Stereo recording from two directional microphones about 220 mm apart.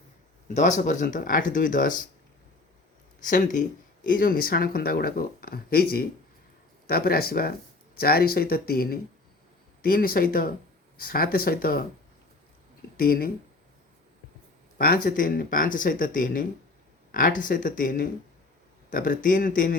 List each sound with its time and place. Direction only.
0.4 s speech: 35° left (ahead or behind)
3.2 s speech: 35° left (ahead or behind)
13.0 s speech: 45° left (ahead or behind)
14.8 s speech: 40° left (ahead or behind)